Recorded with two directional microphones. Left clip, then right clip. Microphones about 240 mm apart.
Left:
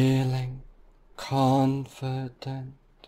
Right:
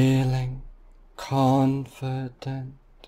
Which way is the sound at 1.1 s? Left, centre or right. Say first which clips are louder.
Right 1 dB; centre.